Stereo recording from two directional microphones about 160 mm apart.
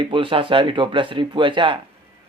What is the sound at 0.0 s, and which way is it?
Speech, 30° right (ahead or behind).